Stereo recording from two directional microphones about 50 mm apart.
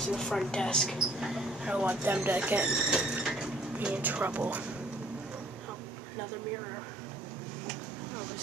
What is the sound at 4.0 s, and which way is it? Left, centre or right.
Speech, right.